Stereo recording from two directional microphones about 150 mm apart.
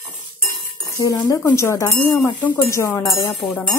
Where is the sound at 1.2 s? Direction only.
20° left (ahead or behind).